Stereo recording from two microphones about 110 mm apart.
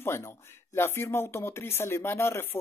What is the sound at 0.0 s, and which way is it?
Speech, 20° left (ahead or behind).